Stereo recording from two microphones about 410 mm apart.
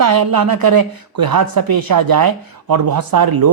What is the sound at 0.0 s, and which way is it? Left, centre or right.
Speech, right.